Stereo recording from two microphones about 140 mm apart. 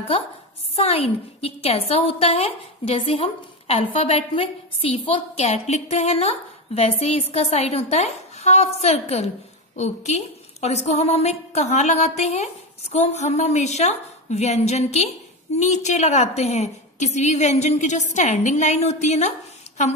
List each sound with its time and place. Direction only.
0.7 s a woman's voice: 45° left (ahead or behind)